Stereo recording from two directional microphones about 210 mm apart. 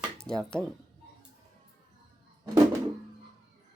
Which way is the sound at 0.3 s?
Centre (ahead or behind).